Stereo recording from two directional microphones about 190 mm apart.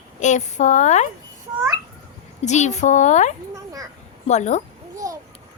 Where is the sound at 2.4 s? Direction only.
40° left (ahead or behind).